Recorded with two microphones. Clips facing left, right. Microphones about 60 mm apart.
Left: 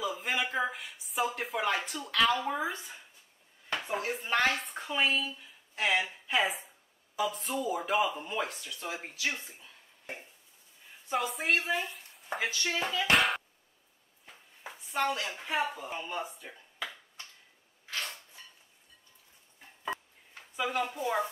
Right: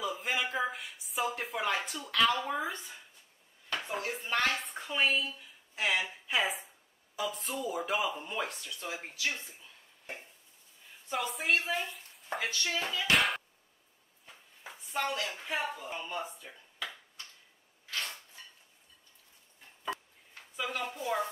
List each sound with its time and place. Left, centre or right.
0.0 s a sound: centre
3.7 s speech: centre
12.6 s speech: centre
13.1 s speech: centre
15.0 s speech: centre
17.9 s a sound: centre
20.5 s speech: centre